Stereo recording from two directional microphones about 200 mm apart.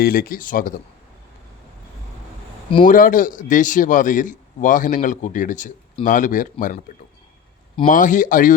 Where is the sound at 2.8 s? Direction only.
40° left (ahead or behind).